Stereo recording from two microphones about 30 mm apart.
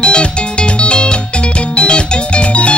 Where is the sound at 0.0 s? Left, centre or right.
Left.